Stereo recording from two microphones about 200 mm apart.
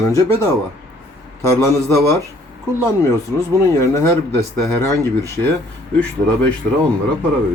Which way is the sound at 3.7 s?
15° left (ahead or behind).